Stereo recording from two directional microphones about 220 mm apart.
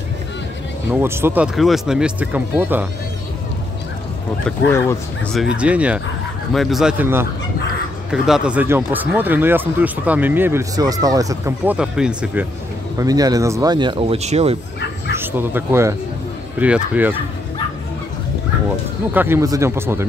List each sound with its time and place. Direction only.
0.9 s speech: 10° right (ahead or behind)
4.5 s speech: 10° left (ahead or behind)
5.3 s speech: 5° right (ahead or behind)
12.9 s speech: 15° right (ahead or behind)
15.1 s speech: 10° right (ahead or behind)
19.1 s speech: 10° right (ahead or behind)